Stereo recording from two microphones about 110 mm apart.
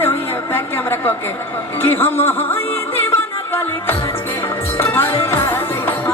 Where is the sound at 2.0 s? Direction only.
20° left (ahead or behind).